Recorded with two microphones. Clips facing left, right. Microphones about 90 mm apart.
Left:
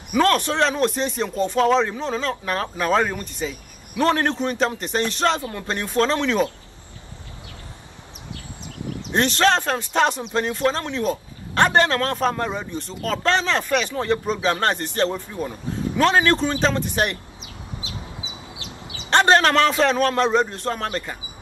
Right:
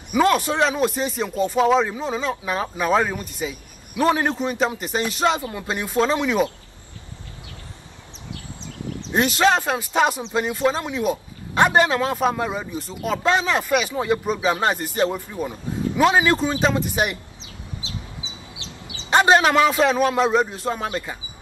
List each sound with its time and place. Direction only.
0.1 s a man's voice: 10° right (ahead or behind)
9.1 s speech: 5° right (ahead or behind)
18.6 s a sound: 25° right (ahead or behind)
19.0 s speech: 10° right (ahead or behind)